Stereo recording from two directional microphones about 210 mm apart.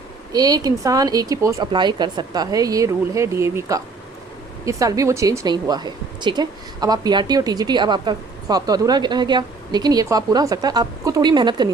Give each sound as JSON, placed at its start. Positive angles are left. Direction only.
{"t": 0.3, "sound": "a woman's voice", "side_deg": -20}